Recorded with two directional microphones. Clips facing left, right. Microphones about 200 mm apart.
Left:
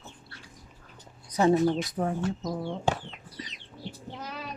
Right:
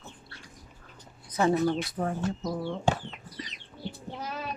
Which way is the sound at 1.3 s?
20° left (ahead or behind).